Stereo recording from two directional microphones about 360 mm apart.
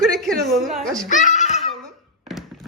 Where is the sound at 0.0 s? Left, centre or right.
Centre.